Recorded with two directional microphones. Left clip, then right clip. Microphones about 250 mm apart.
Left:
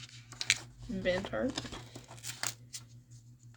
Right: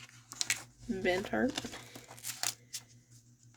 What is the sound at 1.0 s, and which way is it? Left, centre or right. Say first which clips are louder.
Speech: right 1 dB; right.